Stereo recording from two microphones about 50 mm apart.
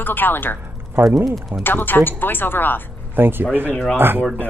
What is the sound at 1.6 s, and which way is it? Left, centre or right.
Speech, left.